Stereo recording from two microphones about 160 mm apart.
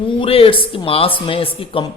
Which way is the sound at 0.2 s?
35° left (ahead or behind).